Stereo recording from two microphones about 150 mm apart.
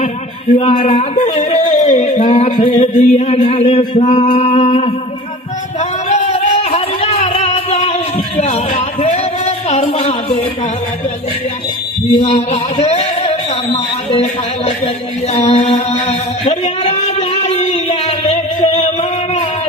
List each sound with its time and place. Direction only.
0.6 s speech: 40° left (ahead or behind)
2.8 s speech: 50° left (ahead or behind)
5.8 s a sound: 50° left (ahead or behind)
12.2 s speech: 45° left (ahead or behind)
15.3 s music: 45° left (ahead or behind)